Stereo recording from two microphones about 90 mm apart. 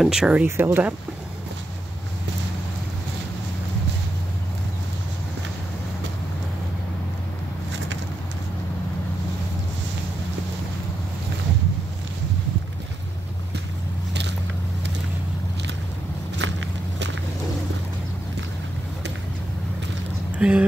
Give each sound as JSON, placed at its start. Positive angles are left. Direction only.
{"t": 0.0, "sound": "speech", "side_deg": -5}
{"t": 0.5, "sound": "speech", "side_deg": -25}
{"t": 20.3, "sound": "a sound", "side_deg": -10}